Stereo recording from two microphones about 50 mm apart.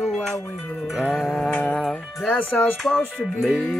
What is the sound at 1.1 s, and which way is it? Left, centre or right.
Music, centre.